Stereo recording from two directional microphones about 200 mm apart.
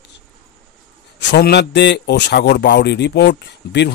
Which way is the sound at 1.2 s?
55° left (ahead or behind).